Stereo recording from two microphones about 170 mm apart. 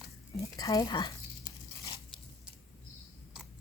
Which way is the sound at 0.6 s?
20° left (ahead or behind).